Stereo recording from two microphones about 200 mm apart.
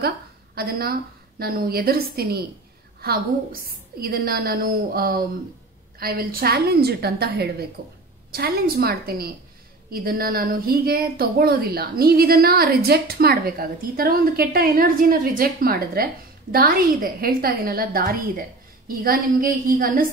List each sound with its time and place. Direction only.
0.6 s a woman's voice: 50° right (ahead or behind)